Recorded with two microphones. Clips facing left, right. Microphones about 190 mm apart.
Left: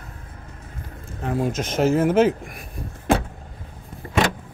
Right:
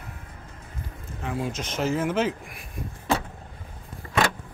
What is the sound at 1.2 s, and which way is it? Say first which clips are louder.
Speech: left 6 dB; 45° left (ahead or behind).